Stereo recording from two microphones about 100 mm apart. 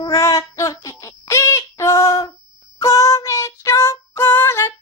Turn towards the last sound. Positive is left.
turn(degrees=25)  # may be behind; listen again after turning